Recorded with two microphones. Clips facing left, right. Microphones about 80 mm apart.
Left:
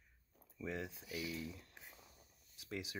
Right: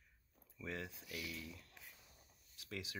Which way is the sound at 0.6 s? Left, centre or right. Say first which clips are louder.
Left 3 dB; left.